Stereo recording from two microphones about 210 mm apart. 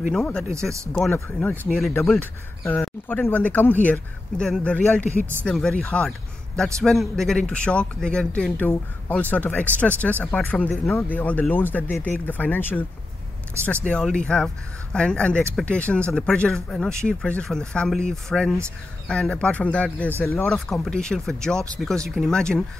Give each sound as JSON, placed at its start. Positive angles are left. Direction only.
{"t": 0.1, "sound": "a man's voice", "side_deg": 5}
{"t": 13.8, "sound": "a man's voice", "side_deg": 5}